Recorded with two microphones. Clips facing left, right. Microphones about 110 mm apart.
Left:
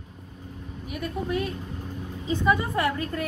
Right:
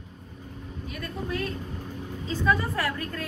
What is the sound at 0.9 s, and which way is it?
A woman's voice, 20° left (ahead or behind).